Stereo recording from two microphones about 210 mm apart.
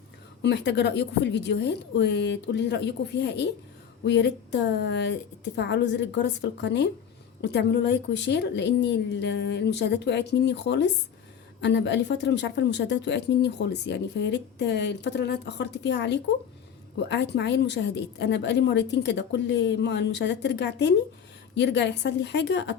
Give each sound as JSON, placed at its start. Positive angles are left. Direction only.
{"t": 0.4, "sound": "speech", "side_deg": 55}